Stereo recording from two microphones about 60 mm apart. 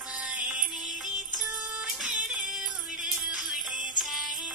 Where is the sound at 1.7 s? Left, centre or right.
Centre.